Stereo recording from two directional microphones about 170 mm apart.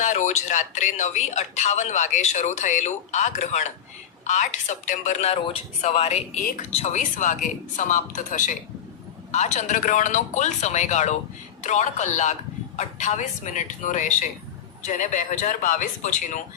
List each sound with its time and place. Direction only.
0.0 s a woman's voice: 45° left (ahead or behind)